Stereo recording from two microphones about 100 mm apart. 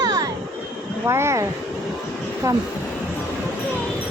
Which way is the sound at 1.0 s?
30° right (ahead or behind).